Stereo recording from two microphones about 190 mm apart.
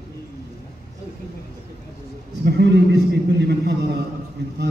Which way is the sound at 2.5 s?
65° right (ahead or behind).